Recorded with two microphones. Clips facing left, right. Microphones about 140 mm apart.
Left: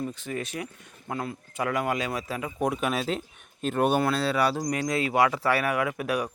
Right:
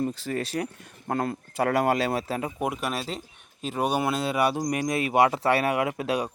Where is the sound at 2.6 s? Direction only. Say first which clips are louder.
Left 2 dB; 5° right (ahead or behind).